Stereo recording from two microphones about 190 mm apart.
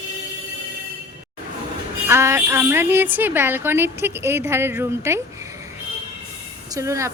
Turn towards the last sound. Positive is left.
turn(degrees=-15)  # may be behind; listen again after turning